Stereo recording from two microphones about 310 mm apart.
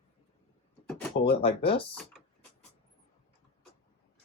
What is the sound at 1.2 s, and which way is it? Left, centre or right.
Speech, centre.